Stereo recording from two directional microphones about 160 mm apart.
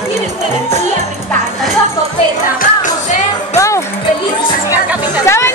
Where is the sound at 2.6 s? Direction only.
55° left (ahead or behind).